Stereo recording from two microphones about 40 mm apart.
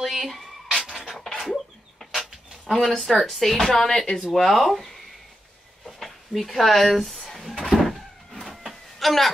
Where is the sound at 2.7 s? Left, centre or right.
Centre.